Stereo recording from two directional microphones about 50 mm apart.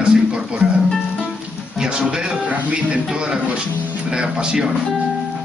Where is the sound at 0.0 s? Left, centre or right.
Centre.